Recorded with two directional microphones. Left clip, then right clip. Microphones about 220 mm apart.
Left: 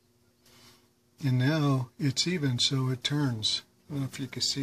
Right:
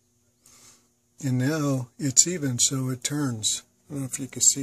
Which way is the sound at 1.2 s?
55° right (ahead or behind).